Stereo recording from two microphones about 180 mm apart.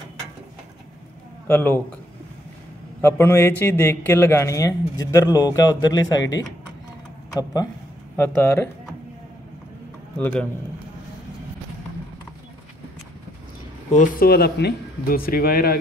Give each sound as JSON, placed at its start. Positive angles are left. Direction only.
{"t": 1.5, "sound": "a man's voice", "side_deg": 10}
{"t": 3.0, "sound": "a man's voice", "side_deg": 15}
{"t": 8.2, "sound": "a man's voice", "side_deg": 10}
{"t": 10.1, "sound": "a man's voice", "side_deg": 10}
{"t": 13.9, "sound": "speech", "side_deg": 60}